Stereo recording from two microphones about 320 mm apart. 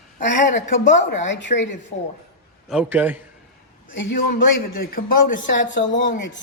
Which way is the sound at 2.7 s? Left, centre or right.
Centre.